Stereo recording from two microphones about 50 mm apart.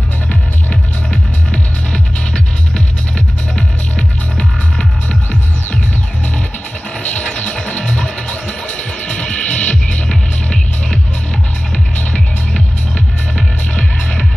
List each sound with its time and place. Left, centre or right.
0.3 s music: left
7.0 s music: left
10.0 s music: centre